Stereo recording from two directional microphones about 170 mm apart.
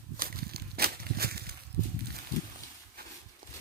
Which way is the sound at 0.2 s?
60° right (ahead or behind).